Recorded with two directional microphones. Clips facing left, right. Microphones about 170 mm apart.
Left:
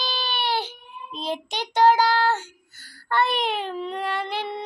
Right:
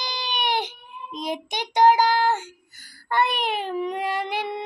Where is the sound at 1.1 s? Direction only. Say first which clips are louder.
Even; 15° right (ahead or behind).